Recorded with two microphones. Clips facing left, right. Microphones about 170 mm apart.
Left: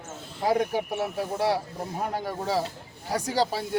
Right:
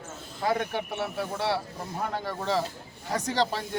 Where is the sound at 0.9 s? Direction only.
40° left (ahead or behind).